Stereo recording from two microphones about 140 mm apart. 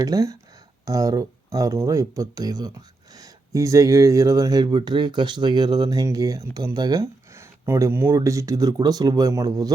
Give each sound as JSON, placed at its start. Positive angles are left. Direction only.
{"t": 0.0, "sound": "speech", "side_deg": -25}